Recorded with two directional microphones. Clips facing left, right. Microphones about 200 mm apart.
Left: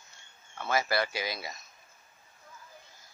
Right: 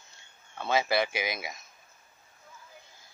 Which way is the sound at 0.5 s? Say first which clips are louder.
Right 2 dB; 20° right (ahead or behind).